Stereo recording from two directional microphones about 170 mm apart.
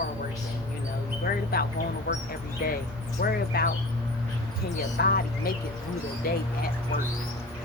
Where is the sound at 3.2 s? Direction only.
55° left (ahead or behind).